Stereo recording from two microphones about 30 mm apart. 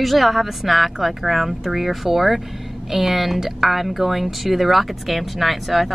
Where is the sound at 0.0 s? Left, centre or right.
Centre.